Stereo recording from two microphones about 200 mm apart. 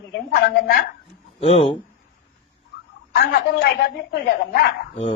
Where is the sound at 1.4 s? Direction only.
30° left (ahead or behind).